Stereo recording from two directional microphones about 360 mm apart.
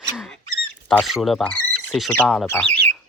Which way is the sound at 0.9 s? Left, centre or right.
Centre.